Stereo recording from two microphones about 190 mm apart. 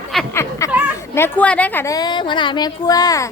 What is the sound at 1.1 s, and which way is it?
A woman's voice, 10° left (ahead or behind).